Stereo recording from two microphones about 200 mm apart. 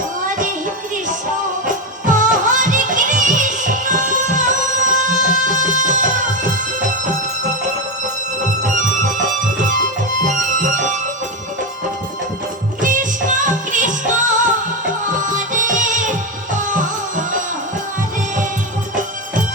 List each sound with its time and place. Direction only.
1.6 s music: 40° right (ahead or behind)
8.6 s music: 40° right (ahead or behind)
10.2 s music: 40° right (ahead or behind)
12.8 s music: 40° right (ahead or behind)
15.2 s music: 40° right (ahead or behind)